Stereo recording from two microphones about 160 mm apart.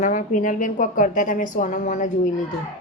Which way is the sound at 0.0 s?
50° left (ahead or behind).